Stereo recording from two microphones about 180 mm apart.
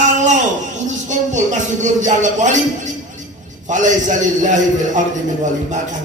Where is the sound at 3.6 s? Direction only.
45° right (ahead or behind).